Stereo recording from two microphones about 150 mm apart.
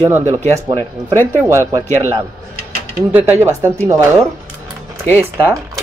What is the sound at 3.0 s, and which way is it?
Speech, 10° right (ahead or behind).